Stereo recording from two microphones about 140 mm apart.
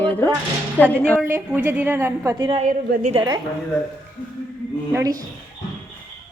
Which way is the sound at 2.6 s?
80° right.